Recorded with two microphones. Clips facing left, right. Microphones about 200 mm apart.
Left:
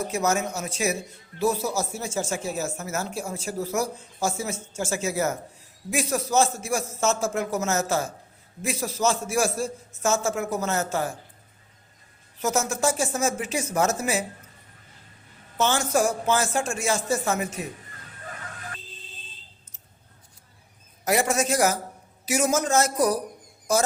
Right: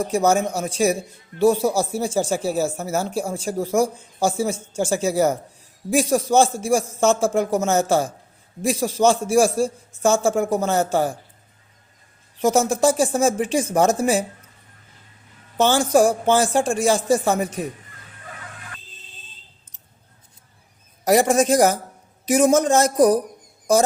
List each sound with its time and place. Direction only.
0.1 s speech: 30° right (ahead or behind)
12.4 s speech: 30° right (ahead or behind)
15.5 s speech: 35° right (ahead or behind)
21.1 s speech: 35° right (ahead or behind)